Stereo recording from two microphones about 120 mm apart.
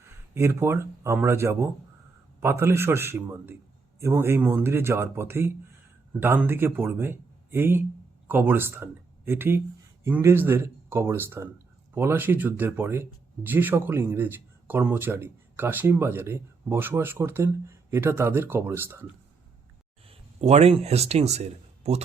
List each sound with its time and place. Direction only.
0.0 s speech: 20° right (ahead or behind)
20.1 s speech: 65° right (ahead or behind)